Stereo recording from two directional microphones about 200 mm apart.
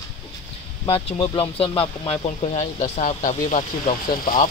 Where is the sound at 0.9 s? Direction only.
30° left (ahead or behind).